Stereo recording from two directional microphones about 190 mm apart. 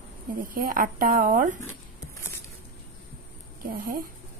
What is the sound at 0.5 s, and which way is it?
A woman's voice, 45° right (ahead or behind).